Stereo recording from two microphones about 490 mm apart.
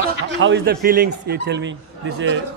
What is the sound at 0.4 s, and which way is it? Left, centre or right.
Speech, right.